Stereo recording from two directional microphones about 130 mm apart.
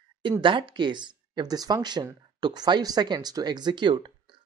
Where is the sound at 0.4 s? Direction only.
40° right (ahead or behind).